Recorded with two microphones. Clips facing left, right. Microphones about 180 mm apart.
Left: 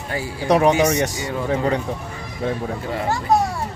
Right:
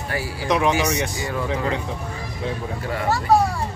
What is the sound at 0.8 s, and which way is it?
Speech, 40° left (ahead or behind).